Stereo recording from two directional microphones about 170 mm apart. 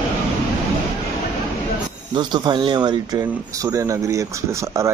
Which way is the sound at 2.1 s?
25° right (ahead or behind).